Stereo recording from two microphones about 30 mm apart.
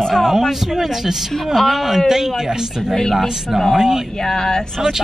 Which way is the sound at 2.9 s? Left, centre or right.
Centre.